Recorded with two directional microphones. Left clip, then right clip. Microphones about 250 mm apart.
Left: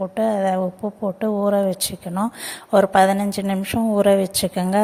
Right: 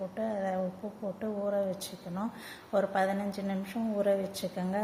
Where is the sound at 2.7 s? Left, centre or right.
Left.